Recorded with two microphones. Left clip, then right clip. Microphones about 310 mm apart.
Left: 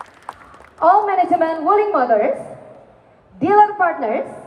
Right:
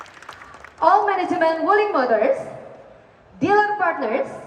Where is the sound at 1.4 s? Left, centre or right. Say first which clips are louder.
Left 2 dB; centre.